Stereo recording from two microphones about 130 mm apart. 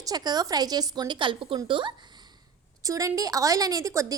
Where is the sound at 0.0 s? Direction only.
30° right (ahead or behind).